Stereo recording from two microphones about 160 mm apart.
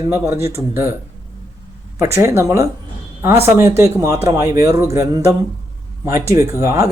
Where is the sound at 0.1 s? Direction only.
15° right (ahead or behind).